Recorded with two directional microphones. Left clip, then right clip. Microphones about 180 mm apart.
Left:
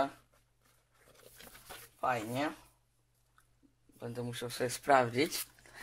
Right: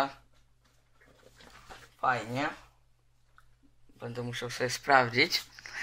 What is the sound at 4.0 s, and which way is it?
Speech, 40° left (ahead or behind).